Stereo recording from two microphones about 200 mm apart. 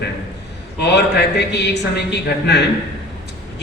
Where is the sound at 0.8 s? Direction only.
55° left (ahead or behind).